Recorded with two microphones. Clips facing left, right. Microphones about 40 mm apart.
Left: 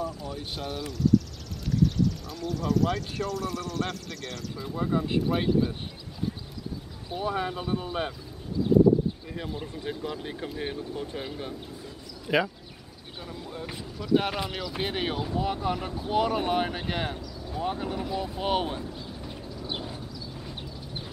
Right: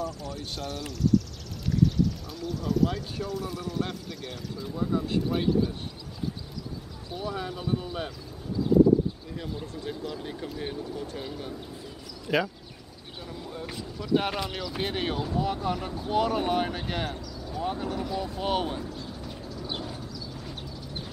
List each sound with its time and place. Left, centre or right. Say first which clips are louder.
0.0 s speech: left 1 dB; centre
4.7 s speech: left 1 dB; left
5.2 s speech: left 1 dB; centre
7.1 s speech: left 4 dB; left
9.3 s speech: left 1 dB; left
12.3 s speech: left 1 dB; centre